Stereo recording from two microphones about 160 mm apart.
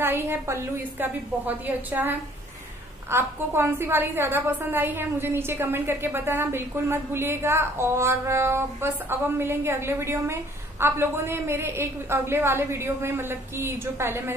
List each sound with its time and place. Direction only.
0.0 s a woman's voice: 15° right (ahead or behind)